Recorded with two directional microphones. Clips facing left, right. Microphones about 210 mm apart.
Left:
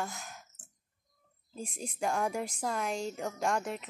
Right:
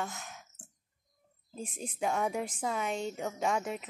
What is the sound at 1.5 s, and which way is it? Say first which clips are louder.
Speech: even; 5° right (ahead or behind).